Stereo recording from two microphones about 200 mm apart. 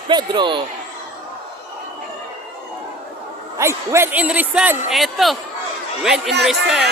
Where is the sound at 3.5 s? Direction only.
15° right (ahead or behind).